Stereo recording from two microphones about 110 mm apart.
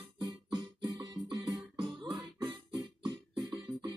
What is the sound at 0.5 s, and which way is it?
Music, 45° right (ahead or behind).